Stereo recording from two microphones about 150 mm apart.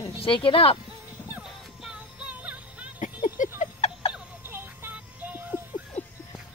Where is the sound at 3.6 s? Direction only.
50° left (ahead or behind).